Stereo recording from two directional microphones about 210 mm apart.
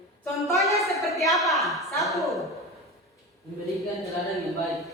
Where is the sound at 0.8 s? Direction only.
Centre (ahead or behind).